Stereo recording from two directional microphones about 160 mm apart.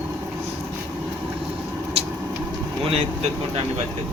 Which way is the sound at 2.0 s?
35° right (ahead or behind).